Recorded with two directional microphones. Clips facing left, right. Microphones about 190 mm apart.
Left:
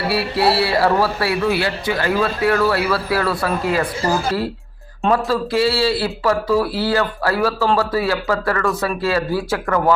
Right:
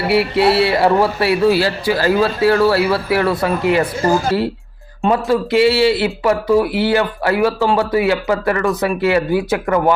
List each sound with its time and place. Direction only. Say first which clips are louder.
0.1 s speech: right 5 dB; 20° right (ahead or behind)
1.5 s speech: right 4 dB; 35° right (ahead or behind)
5.1 s speech: right 4 dB; 20° right (ahead or behind)